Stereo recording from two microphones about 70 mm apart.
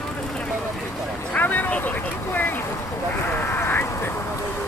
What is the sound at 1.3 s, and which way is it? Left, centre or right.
Vehicle, left.